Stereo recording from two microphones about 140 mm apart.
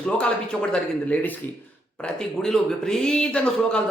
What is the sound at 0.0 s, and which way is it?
A man's voice, 10° left (ahead or behind).